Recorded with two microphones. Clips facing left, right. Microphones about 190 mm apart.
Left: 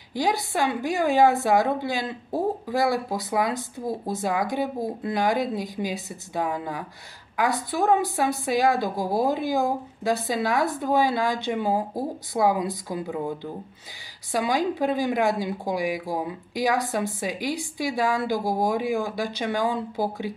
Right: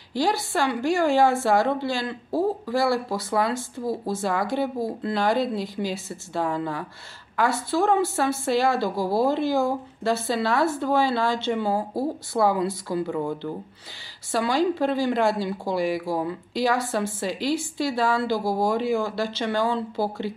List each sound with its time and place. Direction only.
0.1 s a woman's voice: 20° left (ahead or behind)